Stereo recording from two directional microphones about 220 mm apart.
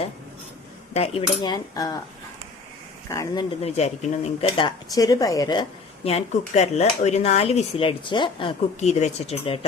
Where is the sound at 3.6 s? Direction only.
30° left (ahead or behind).